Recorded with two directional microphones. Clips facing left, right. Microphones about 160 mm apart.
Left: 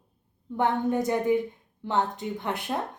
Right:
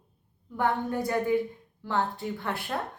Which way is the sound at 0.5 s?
20° left (ahead or behind).